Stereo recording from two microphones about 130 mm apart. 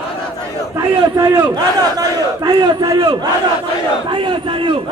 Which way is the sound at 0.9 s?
35° right (ahead or behind).